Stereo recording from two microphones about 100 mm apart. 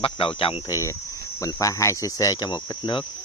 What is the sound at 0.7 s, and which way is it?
Speech, 30° left (ahead or behind).